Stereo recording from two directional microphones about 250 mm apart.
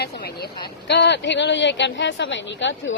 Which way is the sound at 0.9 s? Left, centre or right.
Left.